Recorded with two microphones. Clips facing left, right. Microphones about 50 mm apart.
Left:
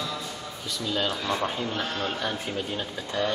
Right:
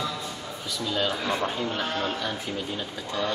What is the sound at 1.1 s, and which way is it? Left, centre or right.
Speech, centre.